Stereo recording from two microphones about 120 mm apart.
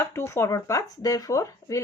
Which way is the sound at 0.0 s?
20° left (ahead or behind).